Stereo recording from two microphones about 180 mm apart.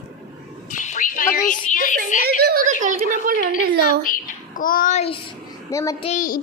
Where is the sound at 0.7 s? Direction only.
45° left (ahead or behind).